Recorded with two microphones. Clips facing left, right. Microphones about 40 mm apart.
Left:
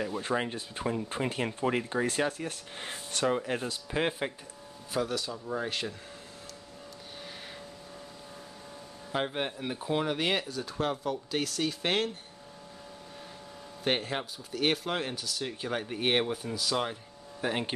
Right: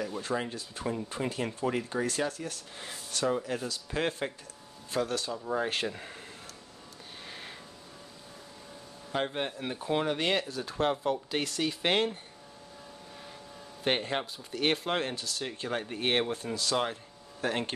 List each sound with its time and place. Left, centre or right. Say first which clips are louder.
0.2 s speech: left 2 dB; left
3.9 s speech: left 1 dB; centre
4.9 s speech: even; centre
5.3 s speech: right 3 dB; centre
5.7 s speech: right 2 dB; right
9.1 s speech: even; centre
13.8 s speech: right 1 dB; centre